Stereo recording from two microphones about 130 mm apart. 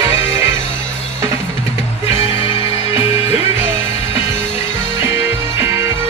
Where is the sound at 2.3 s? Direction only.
45° left (ahead or behind).